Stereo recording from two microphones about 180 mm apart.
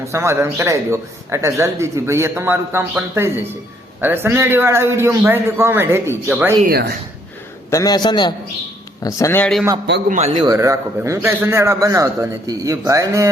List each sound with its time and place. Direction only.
0.1 s a man's voice: 15° right (ahead or behind)
6.7 s speech: 60° right (ahead or behind)
7.7 s a man's voice: 20° left (ahead or behind)
10.1 s a man's voice: 40° right (ahead or behind)
10.4 s a man's voice: 20° right (ahead or behind)